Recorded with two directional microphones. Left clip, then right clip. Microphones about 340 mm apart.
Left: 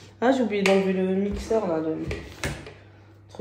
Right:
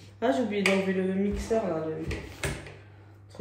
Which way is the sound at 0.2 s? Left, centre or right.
Centre.